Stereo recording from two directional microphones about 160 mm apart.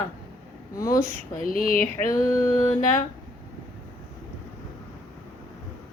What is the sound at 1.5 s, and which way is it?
Speech, 60° left (ahead or behind).